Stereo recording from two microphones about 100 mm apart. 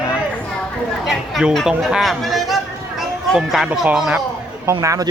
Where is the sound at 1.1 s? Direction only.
Centre (ahead or behind).